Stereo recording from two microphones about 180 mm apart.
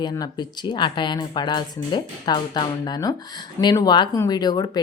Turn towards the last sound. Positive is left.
turn(degrees=25)  # may be behind; listen again after turning